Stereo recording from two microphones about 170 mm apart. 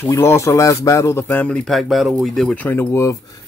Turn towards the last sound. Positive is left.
turn(degrees=15)  # may be behind; listen again after turning